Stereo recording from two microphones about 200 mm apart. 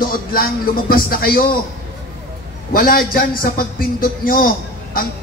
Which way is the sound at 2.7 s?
45° left (ahead or behind).